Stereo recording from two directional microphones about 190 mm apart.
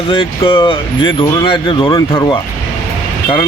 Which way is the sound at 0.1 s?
30° left (ahead or behind).